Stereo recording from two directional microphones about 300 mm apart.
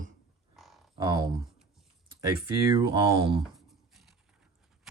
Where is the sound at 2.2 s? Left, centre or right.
Centre.